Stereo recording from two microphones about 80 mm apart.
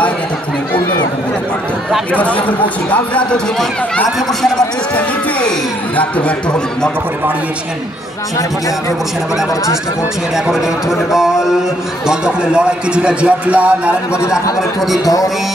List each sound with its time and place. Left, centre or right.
2.1 s speech: centre
5.9 s speech: centre
10.3 s speech: centre